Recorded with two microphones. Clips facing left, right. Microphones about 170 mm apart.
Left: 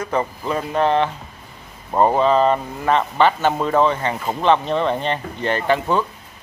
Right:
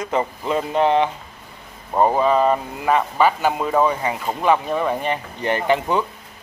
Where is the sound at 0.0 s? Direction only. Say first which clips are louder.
Even; 20° right (ahead or behind).